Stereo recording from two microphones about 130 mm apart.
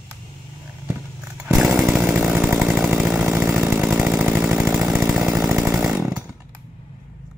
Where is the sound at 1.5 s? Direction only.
Centre (ahead or behind).